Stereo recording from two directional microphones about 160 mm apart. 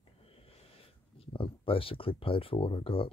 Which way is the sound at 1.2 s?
35° left (ahead or behind).